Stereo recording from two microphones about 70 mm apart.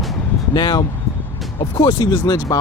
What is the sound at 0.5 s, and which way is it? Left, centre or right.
Speech, left.